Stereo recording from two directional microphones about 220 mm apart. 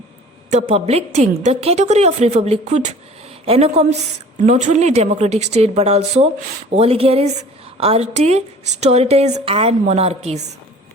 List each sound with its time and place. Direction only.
0.7 s a woman's voice: 30° right (ahead or behind)